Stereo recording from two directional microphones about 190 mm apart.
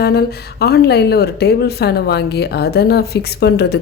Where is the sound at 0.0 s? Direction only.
55° left (ahead or behind).